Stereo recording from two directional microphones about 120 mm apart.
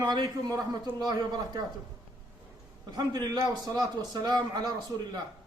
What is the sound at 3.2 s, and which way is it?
A man's voice, 35° right (ahead or behind).